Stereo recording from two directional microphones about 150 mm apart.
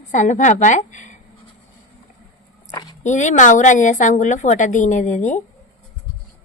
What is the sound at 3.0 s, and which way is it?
A woman's voice, 55° left (ahead or behind).